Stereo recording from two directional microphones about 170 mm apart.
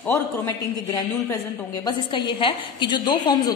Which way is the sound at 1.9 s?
25° left (ahead or behind).